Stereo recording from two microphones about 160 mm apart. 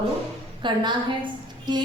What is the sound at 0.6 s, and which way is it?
Speech, 30° right (ahead or behind).